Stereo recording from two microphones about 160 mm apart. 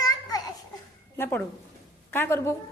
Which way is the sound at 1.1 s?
15° left (ahead or behind).